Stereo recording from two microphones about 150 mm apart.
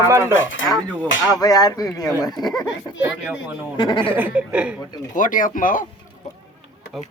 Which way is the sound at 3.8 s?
30° left (ahead or behind).